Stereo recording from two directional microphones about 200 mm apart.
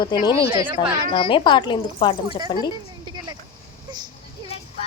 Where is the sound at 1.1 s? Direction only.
25° left (ahead or behind).